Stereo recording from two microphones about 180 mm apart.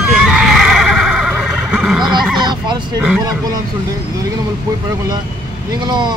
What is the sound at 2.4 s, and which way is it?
Fowl, 25° right (ahead or behind).